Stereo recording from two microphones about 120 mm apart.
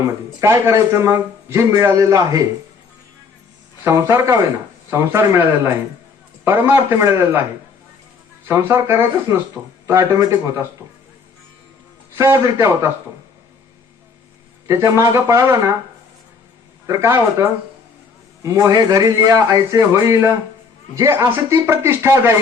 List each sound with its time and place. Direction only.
0.0 s a man's voice: 20° right (ahead or behind)
3.8 s a man's voice: 20° right (ahead or behind)
8.4 s a man's voice: 20° right (ahead or behind)
12.1 s a man's voice: 20° right (ahead or behind)
14.7 s a man's voice: 25° right (ahead or behind)
16.8 s a man's voice: 25° right (ahead or behind)
19.9 s a man's voice: 20° right (ahead or behind)